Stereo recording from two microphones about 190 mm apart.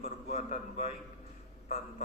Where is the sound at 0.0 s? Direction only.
35° left (ahead or behind).